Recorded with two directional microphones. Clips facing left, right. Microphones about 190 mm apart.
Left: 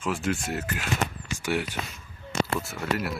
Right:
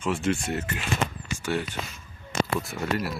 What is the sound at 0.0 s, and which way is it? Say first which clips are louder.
Speech: right 2 dB; centre (ahead or behind).